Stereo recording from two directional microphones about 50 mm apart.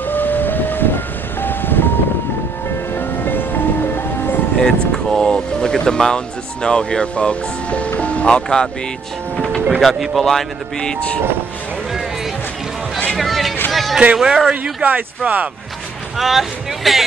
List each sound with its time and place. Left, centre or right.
0.0 s vehicle: left
2.9 s music: left
4.6 s speech: centre
9.8 s speech: centre
10.2 s speech: centre
13.2 s a sound: centre
14.1 s a man's voice: centre
14.5 s speech: right
16.2 s speech: centre